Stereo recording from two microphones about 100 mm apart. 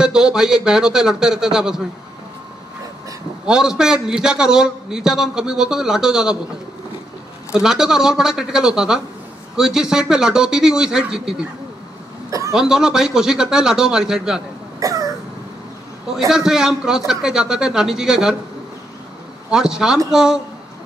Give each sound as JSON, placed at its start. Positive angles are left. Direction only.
{"t": 0.0, "sound": "a man's voice", "side_deg": -5}
{"t": 3.4, "sound": "a man's voice", "side_deg": -5}
{"t": 7.5, "sound": "a man's voice", "side_deg": -5}
{"t": 12.3, "sound": "a sound", "side_deg": -35}
{"t": 12.5, "sound": "a man's voice", "side_deg": -5}
{"t": 14.8, "sound": "cough", "side_deg": -35}
{"t": 16.3, "sound": "a man's voice", "side_deg": -5}
{"t": 19.5, "sound": "a man's voice", "side_deg": -5}